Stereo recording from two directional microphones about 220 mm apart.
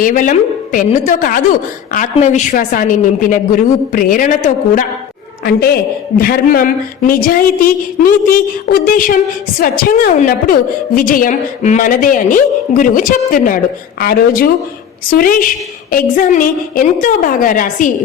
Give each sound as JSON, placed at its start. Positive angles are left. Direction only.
{"t": 0.0, "sound": "a woman's voice", "side_deg": 35}
{"t": 5.5, "sound": "a woman's voice", "side_deg": 45}